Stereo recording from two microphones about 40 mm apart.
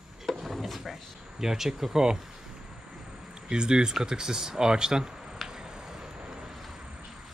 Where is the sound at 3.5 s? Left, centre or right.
Right.